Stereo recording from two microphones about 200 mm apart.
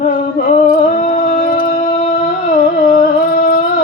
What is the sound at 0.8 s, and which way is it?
Music, 40° left (ahead or behind).